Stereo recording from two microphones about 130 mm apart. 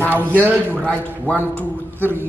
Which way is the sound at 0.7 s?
10° left (ahead or behind).